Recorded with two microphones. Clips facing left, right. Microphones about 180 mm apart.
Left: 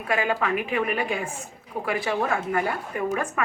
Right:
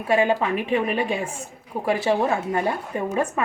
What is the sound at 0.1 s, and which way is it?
A woman's voice, 25° right (ahead or behind).